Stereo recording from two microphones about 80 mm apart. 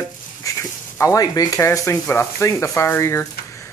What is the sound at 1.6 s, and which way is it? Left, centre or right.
Speech, left.